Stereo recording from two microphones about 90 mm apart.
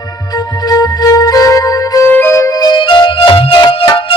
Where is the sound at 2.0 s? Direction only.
25° left (ahead or behind).